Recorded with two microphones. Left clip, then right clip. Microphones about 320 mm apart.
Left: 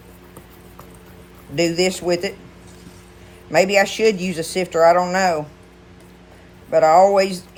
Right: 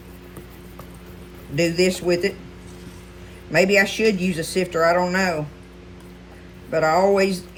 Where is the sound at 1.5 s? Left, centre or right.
Centre.